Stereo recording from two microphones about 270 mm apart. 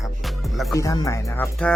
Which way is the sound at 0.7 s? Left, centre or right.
Centre.